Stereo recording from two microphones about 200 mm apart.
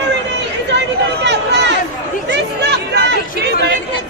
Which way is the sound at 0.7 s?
60° right (ahead or behind).